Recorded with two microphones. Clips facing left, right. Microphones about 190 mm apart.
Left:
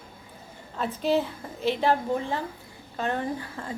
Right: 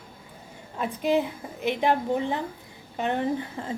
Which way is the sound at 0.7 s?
15° right (ahead or behind).